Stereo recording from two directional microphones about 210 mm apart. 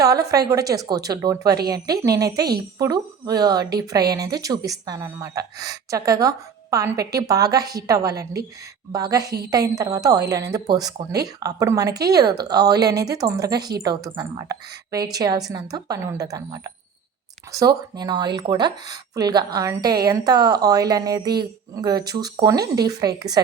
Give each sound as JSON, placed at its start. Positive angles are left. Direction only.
{"t": 0.0, "sound": "a woman's voice", "side_deg": -15}